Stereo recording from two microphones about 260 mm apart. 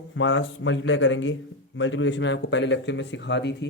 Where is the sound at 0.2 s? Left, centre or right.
Left.